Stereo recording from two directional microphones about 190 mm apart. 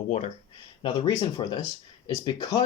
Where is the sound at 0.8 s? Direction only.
25° left (ahead or behind).